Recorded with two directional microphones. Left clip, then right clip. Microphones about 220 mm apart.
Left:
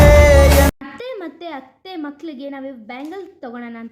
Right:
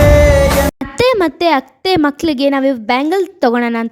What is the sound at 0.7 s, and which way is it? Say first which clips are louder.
A child's voice: right 17 dB; 50° right (ahead or behind).